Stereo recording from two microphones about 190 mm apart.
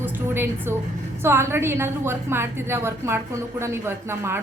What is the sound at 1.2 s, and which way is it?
A woman's voice, 10° right (ahead or behind).